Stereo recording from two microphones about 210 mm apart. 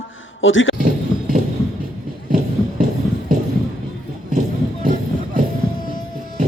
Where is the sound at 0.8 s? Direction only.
40° right (ahead or behind).